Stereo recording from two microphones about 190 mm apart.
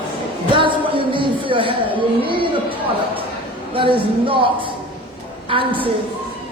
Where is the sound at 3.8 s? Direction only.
25° right (ahead or behind).